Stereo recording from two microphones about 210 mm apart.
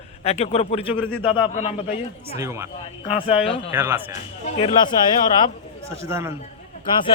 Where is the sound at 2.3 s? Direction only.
15° right (ahead or behind).